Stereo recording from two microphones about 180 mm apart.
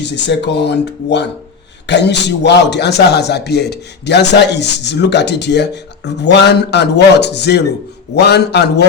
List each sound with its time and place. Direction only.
0.0 s speech: 75° left (ahead or behind)